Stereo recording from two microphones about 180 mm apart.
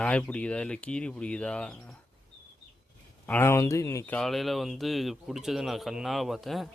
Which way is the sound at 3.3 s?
10° left (ahead or behind).